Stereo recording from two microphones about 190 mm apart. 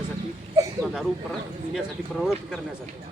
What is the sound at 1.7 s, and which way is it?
Speech, centre (ahead or behind).